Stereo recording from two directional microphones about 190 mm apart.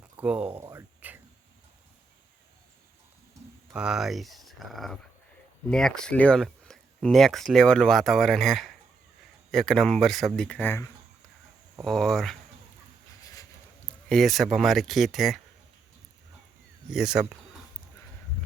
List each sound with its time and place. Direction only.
0.2 s speech: 5° right (ahead or behind)
0.6 s a sound: 10° right (ahead or behind)
3.7 s speech: 5° right (ahead or behind); by 10.9 s 10° left (ahead or behind)
11.8 s speech: centre (ahead or behind)
13.2 s a sound: 15° left (ahead or behind)
14.1 s speech: centre (ahead or behind)
16.9 s speech: 5° right (ahead or behind)